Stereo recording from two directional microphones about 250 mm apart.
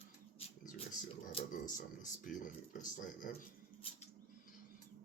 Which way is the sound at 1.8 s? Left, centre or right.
Left.